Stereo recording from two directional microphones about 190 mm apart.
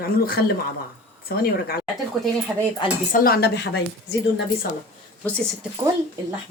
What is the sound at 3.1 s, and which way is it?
A woman's voice, 50° left (ahead or behind).